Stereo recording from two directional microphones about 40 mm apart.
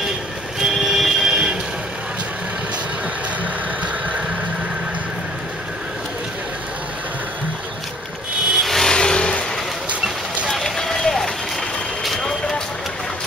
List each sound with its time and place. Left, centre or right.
0.6 s music: centre
8.5 s vehicle: centre
8.9 s vehicle: centre
10.5 s run: centre
12.3 s vehicle: centre